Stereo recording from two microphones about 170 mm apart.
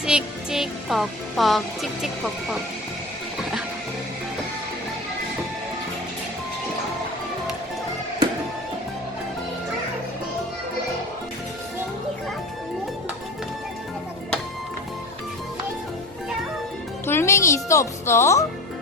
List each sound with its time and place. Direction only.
0.0 s speech: 5° right (ahead or behind)
17.1 s speech: 15° left (ahead or behind)